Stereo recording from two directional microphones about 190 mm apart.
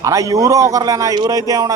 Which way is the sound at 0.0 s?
15° right (ahead or behind).